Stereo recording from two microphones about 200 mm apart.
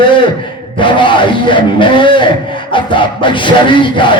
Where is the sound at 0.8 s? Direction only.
25° left (ahead or behind).